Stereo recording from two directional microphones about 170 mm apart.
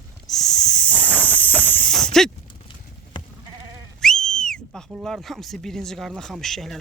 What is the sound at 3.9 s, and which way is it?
Speech, 5° left (ahead or behind).